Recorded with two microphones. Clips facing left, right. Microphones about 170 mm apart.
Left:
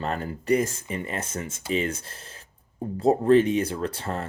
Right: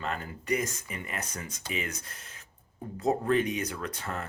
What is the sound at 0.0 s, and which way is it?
Speech, 35° left (ahead or behind).